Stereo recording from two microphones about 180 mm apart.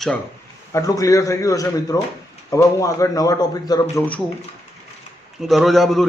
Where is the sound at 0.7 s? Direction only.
15° left (ahead or behind).